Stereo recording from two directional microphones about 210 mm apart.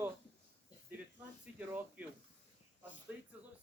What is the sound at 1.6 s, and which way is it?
Speech, 10° right (ahead or behind).